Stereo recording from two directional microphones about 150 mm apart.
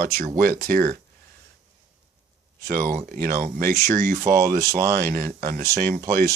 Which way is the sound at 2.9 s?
65° right (ahead or behind).